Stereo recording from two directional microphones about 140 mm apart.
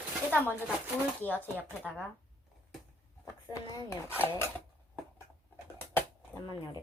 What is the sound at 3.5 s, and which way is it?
Speech, 20° left (ahead or behind).